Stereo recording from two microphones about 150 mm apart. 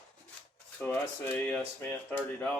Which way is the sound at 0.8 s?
10° left (ahead or behind).